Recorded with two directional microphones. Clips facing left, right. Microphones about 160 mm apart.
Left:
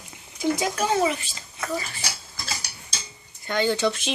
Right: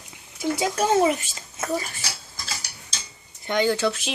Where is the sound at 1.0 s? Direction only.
45° right (ahead or behind).